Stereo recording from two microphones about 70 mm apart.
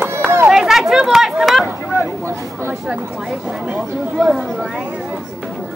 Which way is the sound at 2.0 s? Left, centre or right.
Right.